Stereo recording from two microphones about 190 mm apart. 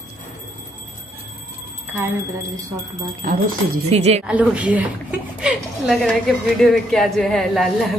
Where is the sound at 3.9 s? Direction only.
35° right (ahead or behind).